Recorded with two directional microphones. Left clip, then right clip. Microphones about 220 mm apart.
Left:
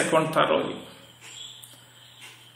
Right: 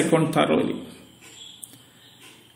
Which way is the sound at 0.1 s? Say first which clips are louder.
Left 1 dB; 35° right (ahead or behind).